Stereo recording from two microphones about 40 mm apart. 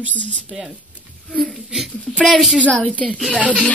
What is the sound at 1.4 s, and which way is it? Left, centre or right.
Speech, centre.